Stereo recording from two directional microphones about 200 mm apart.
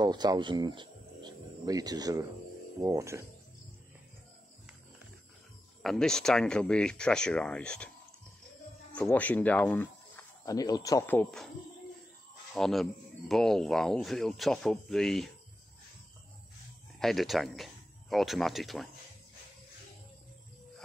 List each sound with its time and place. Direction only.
0.0 s speech: 20° right (ahead or behind)
5.8 s speech: centre (ahead or behind)
8.9 s speech: 5° left (ahead or behind)
12.5 s speech: centre (ahead or behind)
17.0 s speech: centre (ahead or behind)